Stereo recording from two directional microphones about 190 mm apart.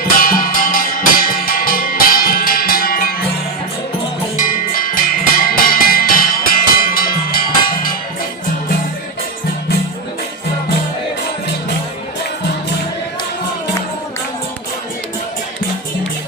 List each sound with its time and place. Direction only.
0.2 s music: 45° left (ahead or behind)
4.4 s music: 45° left (ahead or behind)